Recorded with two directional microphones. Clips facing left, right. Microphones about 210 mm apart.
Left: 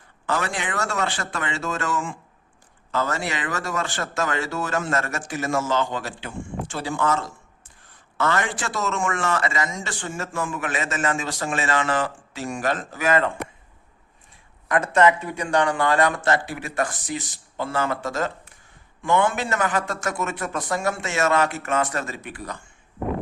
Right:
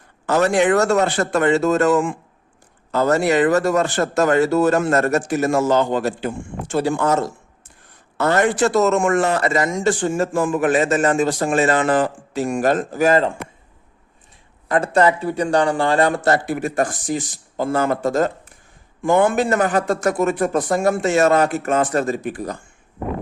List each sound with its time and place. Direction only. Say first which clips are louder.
0.3 s a man's voice: right 11 dB; 45° right (ahead or behind)
1.9 s speech: right 10 dB; 55° right (ahead or behind)
2.9 s a man's voice: right 10 dB; 40° right (ahead or behind)
14.7 s a man's voice: right 2 dB; 35° right (ahead or behind)
16.5 s a man's voice: right 6 dB; 50° right (ahead or behind)